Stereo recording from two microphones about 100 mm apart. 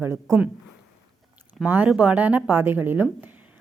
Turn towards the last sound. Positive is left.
turn(degrees=-20)  # may be behind; listen again after turning